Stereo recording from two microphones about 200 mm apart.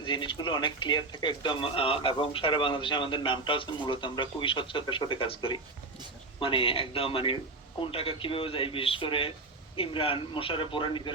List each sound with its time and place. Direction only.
0.0 s speech: 25° left (ahead or behind)